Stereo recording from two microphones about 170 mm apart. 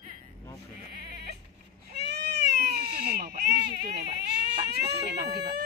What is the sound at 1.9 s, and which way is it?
Cat, 75° right (ahead or behind).